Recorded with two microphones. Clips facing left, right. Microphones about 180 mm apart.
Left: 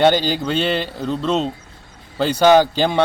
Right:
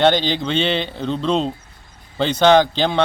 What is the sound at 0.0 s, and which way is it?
A man's voice, 10° left (ahead or behind).